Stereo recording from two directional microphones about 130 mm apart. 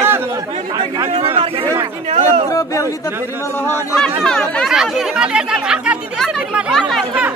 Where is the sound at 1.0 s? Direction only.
45° right (ahead or behind).